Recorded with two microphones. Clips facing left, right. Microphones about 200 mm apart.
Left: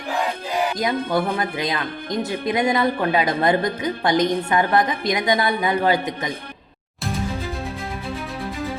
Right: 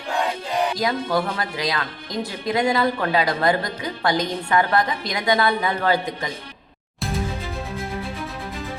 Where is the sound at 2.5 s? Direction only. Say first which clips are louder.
Even; 20° left (ahead or behind).